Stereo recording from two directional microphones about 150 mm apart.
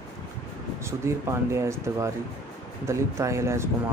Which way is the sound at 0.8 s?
20° right (ahead or behind).